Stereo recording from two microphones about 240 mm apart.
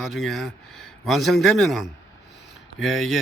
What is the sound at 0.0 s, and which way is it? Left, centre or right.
Speech, centre.